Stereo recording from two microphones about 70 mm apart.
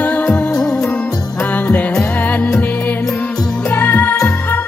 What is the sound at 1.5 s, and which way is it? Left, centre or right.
Music, left.